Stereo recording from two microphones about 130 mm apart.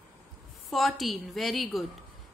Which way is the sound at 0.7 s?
Centre (ahead or behind).